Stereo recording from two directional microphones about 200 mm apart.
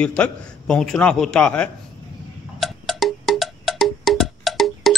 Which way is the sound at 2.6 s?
Centre (ahead or behind).